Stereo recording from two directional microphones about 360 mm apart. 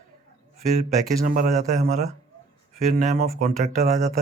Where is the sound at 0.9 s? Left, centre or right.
Right.